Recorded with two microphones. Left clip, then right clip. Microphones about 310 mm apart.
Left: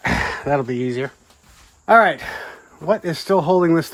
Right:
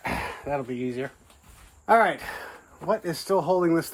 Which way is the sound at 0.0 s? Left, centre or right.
Left.